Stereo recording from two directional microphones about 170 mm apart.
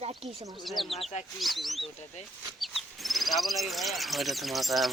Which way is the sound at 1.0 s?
40° left (ahead or behind).